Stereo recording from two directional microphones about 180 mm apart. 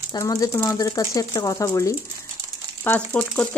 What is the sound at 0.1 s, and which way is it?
Speech, 20° left (ahead or behind).